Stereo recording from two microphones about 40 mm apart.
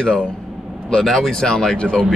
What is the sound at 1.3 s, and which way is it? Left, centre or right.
Speech, centre.